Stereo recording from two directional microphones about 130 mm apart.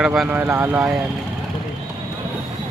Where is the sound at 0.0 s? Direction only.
5° right (ahead or behind).